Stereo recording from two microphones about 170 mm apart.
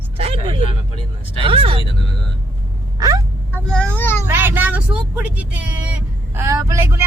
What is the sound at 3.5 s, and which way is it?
Speech, 5° left (ahead or behind).